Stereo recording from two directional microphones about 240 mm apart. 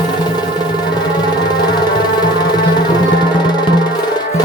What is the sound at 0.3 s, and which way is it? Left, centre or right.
Music, centre.